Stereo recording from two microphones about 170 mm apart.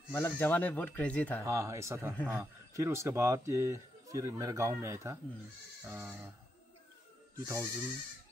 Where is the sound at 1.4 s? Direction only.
15° right (ahead or behind).